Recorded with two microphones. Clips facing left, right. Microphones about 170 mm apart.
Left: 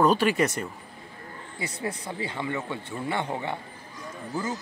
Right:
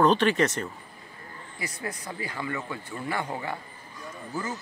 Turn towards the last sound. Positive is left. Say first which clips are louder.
# left 2 dB
turn(degrees=15)  # may be behind; listen again after turning